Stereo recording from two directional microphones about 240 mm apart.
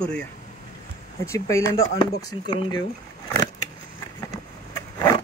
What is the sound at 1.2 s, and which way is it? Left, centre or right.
Speech, centre.